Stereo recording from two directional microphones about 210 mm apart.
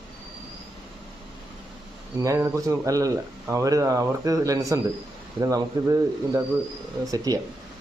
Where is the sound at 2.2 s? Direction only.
15° right (ahead or behind).